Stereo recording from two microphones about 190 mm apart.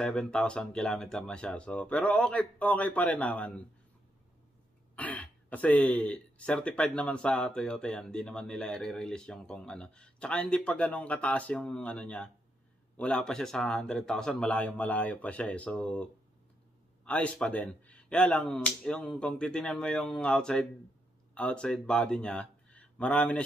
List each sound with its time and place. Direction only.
0.0 s speech: 5° left (ahead or behind)
4.9 s speech: 10° left (ahead or behind)